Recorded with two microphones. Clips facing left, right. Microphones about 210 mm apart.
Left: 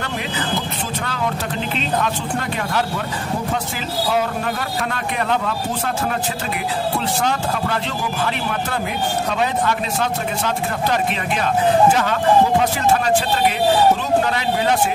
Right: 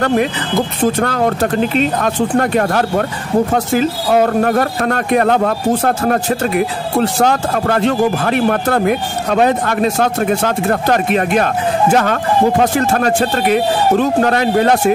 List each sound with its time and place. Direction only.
0.0 s speech: 55° right (ahead or behind)